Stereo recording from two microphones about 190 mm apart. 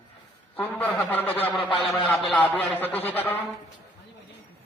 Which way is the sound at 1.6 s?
25° left (ahead or behind).